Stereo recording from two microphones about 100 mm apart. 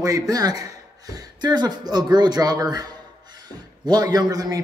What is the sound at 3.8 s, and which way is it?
Speech, 40° right (ahead or behind).